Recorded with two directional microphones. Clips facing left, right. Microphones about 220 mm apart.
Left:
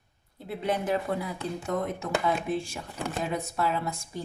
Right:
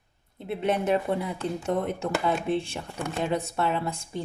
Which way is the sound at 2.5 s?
30° right (ahead or behind).